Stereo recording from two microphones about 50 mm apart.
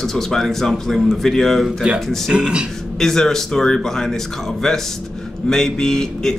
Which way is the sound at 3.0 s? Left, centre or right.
Centre.